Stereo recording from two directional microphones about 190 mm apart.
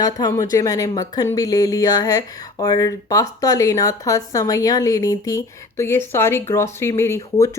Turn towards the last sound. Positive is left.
turn(degrees=15)  # may be behind; listen again after turning